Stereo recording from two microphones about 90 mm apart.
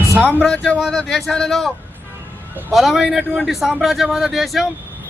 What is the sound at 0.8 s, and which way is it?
Speech, centre (ahead or behind).